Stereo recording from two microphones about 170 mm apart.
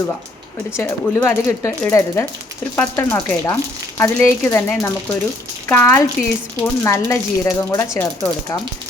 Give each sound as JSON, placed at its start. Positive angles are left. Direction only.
{"t": 0.8, "sound": "speech", "side_deg": 15}
{"t": 6.1, "sound": "speech", "side_deg": 0}
{"t": 6.8, "sound": "speech", "side_deg": 20}